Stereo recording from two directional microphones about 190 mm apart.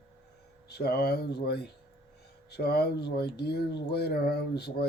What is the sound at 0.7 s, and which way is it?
Speech, 55° left (ahead or behind).